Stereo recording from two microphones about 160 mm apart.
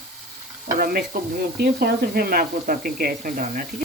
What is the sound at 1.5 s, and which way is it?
Speech, 70° right (ahead or behind).